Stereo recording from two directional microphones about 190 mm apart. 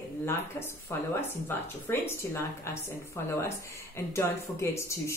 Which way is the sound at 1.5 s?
10° left (ahead or behind).